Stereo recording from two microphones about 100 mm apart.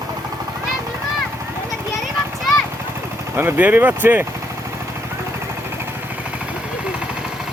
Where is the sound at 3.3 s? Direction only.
20° right (ahead or behind).